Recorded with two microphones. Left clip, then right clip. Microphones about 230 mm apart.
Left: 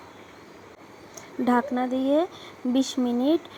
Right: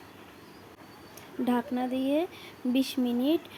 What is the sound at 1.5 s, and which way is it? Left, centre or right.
Speech, centre.